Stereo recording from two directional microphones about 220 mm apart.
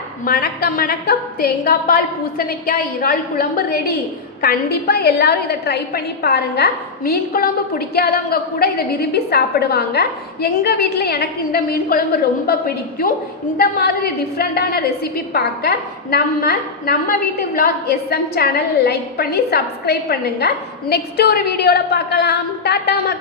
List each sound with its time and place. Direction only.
0.3 s a woman's voice: 45° left (ahead or behind)